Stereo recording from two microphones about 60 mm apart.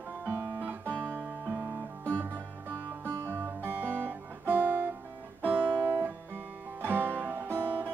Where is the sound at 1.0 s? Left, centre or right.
Right.